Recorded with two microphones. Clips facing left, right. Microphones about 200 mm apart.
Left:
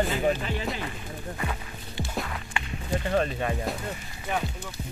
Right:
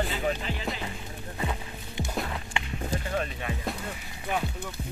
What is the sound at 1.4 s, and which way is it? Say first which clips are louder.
Music: right 1 dB; 20° right (ahead or behind).